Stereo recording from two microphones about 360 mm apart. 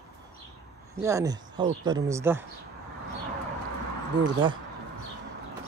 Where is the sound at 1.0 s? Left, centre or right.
Centre.